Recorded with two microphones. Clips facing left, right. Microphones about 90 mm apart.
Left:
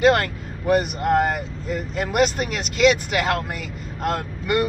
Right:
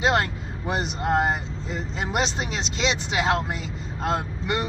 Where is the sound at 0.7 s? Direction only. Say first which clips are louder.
Left 6 dB; 25° right (ahead or behind).